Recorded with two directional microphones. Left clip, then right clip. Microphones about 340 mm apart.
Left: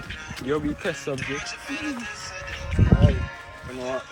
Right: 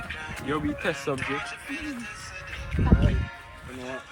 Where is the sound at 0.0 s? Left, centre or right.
Centre.